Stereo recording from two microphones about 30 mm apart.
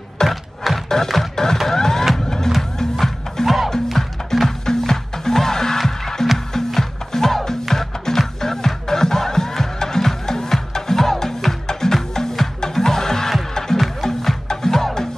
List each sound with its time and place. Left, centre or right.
0.2 s a sound: left
0.8 s music: centre
3.4 s music: centre
4.3 s music: centre